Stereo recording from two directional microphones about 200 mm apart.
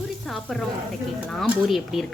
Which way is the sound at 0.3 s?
Centre (ahead or behind).